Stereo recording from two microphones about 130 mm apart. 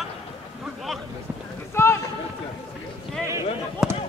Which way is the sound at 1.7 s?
20° left (ahead or behind).